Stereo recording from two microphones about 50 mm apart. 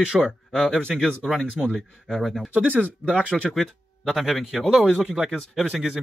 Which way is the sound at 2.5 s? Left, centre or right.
Right.